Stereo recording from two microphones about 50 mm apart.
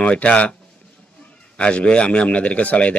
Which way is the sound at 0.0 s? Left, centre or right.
Left.